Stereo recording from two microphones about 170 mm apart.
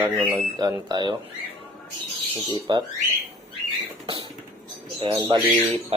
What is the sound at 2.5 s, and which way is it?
Speech, 30° right (ahead or behind).